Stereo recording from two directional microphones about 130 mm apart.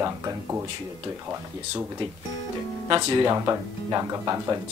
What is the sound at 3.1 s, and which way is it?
Speech, 25° right (ahead or behind).